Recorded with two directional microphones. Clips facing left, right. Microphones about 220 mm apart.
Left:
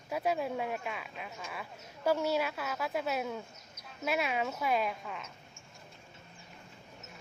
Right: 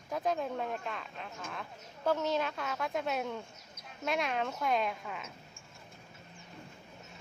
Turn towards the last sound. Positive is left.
turn(degrees=0)  # may be behind; listen again after turning